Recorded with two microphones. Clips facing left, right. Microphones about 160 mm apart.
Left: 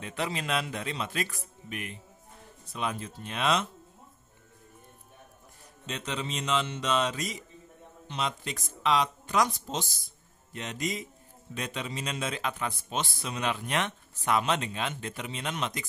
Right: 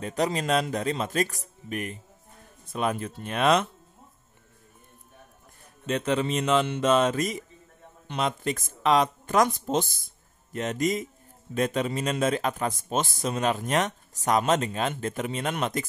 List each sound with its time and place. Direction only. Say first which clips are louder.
0.0 s a man's voice: right 7 dB; 40° right (ahead or behind)
5.9 s a man's voice: right 9 dB; 55° right (ahead or behind)